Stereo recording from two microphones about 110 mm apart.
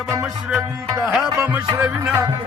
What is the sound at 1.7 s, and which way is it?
Music, 15° right (ahead or behind).